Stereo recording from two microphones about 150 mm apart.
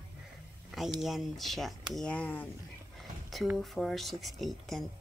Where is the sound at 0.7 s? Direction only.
Centre (ahead or behind).